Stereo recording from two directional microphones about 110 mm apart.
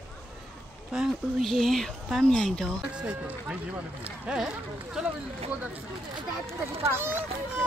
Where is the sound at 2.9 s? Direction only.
10° right (ahead or behind).